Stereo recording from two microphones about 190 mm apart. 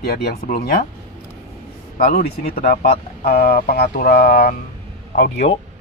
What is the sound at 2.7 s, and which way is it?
Speech, 50° left (ahead or behind).